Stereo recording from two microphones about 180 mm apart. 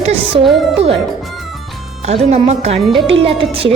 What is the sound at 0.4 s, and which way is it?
Speech, centre (ahead or behind).